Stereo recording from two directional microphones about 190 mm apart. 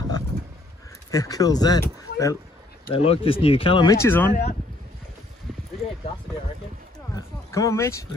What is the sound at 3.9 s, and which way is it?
Speech, 15° left (ahead or behind).